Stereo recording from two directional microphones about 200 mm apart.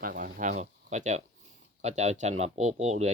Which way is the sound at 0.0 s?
45° right (ahead or behind).